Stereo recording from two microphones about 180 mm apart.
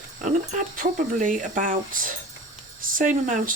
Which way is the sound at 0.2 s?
45° right (ahead or behind).